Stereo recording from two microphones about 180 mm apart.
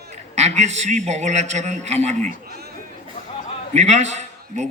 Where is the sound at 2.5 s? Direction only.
60° right (ahead or behind).